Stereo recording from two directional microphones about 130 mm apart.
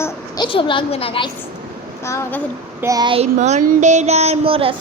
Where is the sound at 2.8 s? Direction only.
25° right (ahead or behind).